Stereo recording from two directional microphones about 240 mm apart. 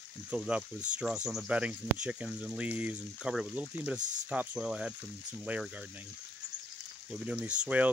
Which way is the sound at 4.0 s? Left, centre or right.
Right.